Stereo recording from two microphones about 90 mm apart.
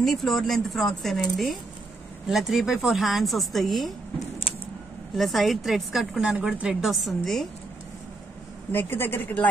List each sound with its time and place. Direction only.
0.0 s a woman's voice: 5° left (ahead or behind)
5.1 s a woman's voice: centre (ahead or behind)
8.7 s speech: 25° left (ahead or behind)